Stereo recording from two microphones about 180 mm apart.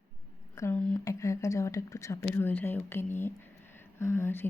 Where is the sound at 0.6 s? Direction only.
10° left (ahead or behind).